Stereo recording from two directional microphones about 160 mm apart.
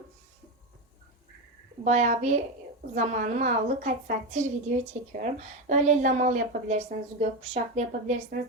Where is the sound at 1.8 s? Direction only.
45° right (ahead or behind).